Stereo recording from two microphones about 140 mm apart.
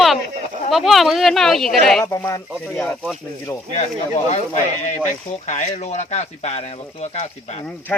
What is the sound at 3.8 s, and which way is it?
Speech, 55° left (ahead or behind).